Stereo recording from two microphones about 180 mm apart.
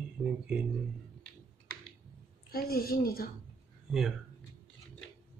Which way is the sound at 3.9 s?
Centre (ahead or behind).